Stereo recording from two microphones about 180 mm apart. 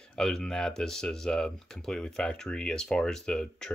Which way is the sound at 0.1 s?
5° left (ahead or behind).